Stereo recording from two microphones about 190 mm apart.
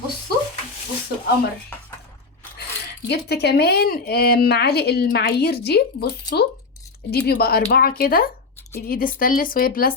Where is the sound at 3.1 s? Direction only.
60° left (ahead or behind).